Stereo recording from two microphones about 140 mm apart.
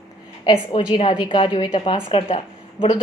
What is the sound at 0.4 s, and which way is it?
A woman's voice, 35° left (ahead or behind).